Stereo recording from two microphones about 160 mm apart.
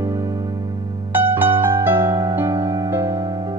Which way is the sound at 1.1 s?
15° right (ahead or behind).